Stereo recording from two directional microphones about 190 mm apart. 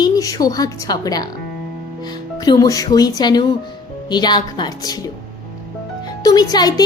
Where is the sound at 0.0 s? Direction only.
20° left (ahead or behind).